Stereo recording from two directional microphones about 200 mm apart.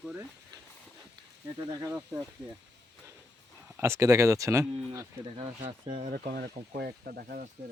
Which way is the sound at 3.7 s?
15° right (ahead or behind).